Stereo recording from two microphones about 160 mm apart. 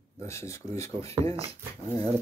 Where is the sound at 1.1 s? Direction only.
35° right (ahead or behind).